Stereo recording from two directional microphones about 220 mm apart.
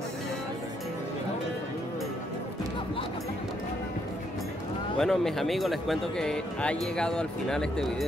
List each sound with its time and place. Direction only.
4.9 s speech: centre (ahead or behind)